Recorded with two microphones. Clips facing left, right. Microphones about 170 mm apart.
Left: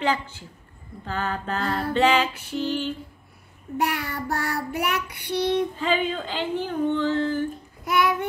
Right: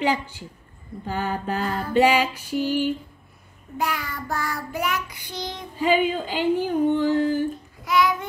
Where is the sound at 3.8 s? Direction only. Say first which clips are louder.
Left 1 dB; 65° left (ahead or behind).